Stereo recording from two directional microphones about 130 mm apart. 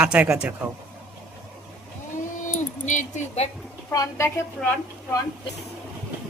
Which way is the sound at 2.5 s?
70° left (ahead or behind).